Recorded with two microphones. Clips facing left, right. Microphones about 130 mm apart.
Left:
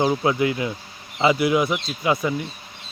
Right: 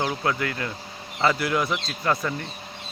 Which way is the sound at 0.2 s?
15° left (ahead or behind).